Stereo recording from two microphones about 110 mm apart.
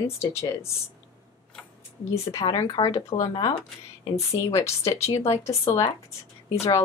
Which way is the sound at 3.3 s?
50° left (ahead or behind).